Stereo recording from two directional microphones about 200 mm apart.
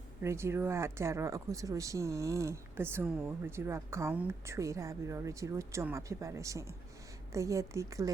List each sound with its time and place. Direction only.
0.2 s speech: 15° right (ahead or behind)